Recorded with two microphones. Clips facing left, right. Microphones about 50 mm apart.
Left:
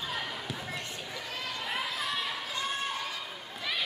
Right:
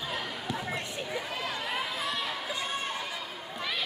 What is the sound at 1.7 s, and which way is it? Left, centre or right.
Chatter, centre.